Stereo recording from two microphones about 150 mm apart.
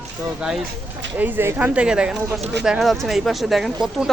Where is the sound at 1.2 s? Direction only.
15° right (ahead or behind).